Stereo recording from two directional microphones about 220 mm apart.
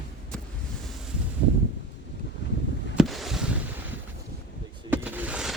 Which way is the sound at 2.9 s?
Centre (ahead or behind).